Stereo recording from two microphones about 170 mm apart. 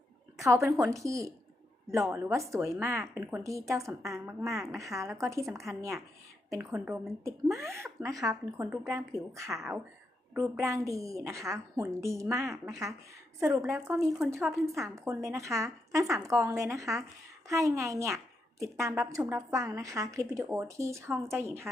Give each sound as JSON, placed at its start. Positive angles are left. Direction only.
{"t": 0.3, "sound": "a woman's voice", "side_deg": -15}
{"t": 4.4, "sound": "a woman's voice", "side_deg": 0}
{"t": 4.8, "sound": "a woman's voice", "side_deg": -20}